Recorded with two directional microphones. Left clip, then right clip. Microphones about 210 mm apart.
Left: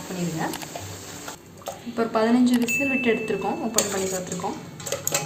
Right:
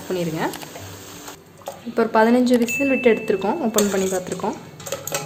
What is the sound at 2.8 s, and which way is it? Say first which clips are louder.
Speech: right 5 dB; 40° right (ahead or behind).